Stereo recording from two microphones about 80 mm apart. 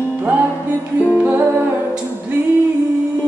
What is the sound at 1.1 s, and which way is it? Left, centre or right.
Music, centre.